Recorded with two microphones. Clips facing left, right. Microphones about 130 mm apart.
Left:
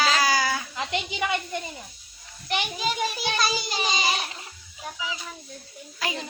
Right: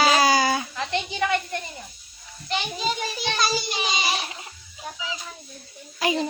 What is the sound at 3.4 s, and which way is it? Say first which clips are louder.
Music: right 3 dB; 5° right (ahead or behind).